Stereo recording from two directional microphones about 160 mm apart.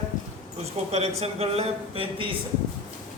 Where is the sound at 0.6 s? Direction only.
40° right (ahead or behind).